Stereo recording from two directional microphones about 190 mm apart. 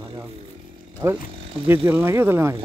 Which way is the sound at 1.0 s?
15° right (ahead or behind).